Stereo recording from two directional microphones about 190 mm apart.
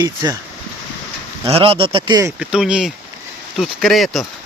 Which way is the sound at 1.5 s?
30° right (ahead or behind).